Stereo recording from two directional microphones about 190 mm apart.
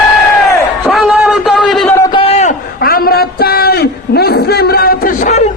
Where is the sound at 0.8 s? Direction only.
Centre (ahead or behind).